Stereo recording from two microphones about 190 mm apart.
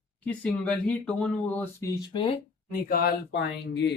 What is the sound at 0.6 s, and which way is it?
Speech, 5° left (ahead or behind).